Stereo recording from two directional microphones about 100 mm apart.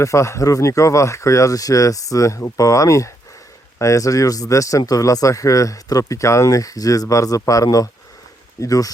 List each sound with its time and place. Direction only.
0.0 s speech: 30° left (ahead or behind)